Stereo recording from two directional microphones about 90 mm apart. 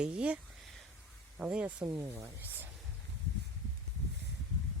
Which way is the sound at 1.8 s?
30° right (ahead or behind).